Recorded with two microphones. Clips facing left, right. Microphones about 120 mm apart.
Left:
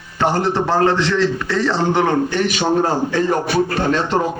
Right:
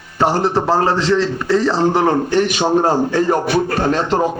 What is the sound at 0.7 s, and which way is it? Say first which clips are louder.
A man's voice: even; 35° right (ahead or behind).